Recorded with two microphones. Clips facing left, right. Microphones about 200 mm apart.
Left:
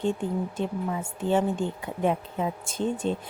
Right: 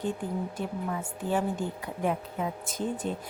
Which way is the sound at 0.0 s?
25° left (ahead or behind).